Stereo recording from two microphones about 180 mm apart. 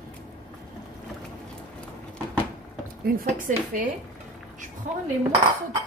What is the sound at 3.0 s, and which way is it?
A woman's voice, 50° right (ahead or behind).